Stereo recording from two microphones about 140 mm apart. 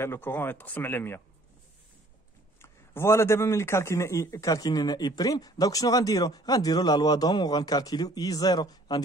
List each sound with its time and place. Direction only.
0.0 s speech: 15° left (ahead or behind)
2.6 s a man's voice: 20° left (ahead or behind)